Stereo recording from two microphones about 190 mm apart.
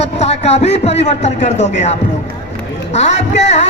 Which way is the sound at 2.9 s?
35° left (ahead or behind).